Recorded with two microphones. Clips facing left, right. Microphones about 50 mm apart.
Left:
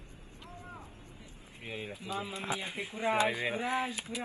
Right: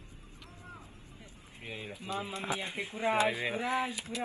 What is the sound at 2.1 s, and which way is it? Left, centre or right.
Pigeon, right.